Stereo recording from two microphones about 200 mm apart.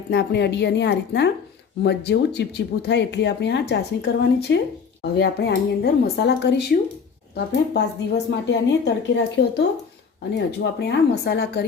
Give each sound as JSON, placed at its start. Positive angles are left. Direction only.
{"t": 0.1, "sound": "speech", "side_deg": 55}